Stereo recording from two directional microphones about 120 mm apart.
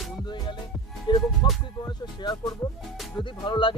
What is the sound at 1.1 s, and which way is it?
Music, 40° left (ahead or behind).